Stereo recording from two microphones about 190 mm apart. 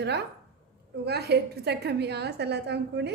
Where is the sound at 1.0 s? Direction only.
60° right (ahead or behind).